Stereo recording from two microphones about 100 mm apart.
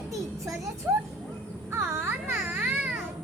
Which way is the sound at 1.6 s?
25° right (ahead or behind).